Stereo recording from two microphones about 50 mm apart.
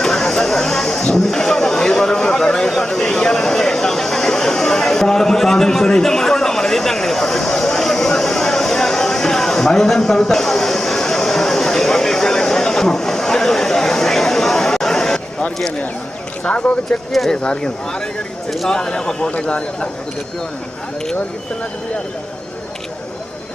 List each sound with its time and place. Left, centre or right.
0.0 s a sound: centre
16.4 s speech: left
17.1 s speech: centre
17.3 s speech: centre